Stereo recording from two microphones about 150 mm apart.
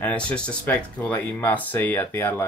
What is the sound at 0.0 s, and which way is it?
Speech, 10° left (ahead or behind).